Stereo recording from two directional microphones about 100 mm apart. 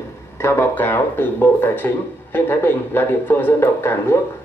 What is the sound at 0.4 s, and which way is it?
Speech, 25° left (ahead or behind).